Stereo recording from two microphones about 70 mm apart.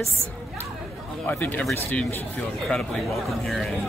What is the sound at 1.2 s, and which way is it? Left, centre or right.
Speech, left.